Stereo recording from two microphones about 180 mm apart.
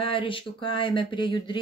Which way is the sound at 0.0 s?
30° left (ahead or behind).